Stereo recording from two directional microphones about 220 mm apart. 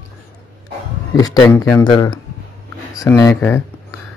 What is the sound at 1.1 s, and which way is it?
Speech, 15° left (ahead or behind).